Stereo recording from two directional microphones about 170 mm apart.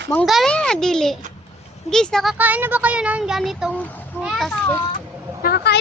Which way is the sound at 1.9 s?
5° left (ahead or behind).